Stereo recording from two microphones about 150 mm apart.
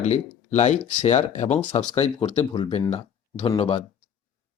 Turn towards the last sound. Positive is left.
turn(degrees=40)  # may be behind; listen again after turning